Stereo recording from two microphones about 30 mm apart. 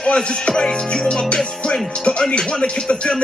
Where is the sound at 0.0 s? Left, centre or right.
Left.